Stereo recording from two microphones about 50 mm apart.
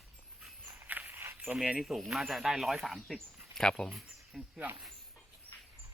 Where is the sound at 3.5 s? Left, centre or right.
Centre.